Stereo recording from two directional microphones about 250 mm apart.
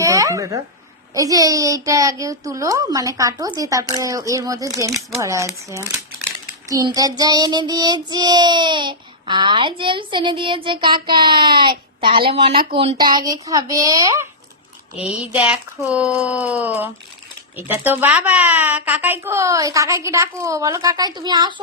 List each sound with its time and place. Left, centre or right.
0.0 s a sound: centre
1.1 s speech: centre
6.7 s child singing: centre
12.3 s speech: right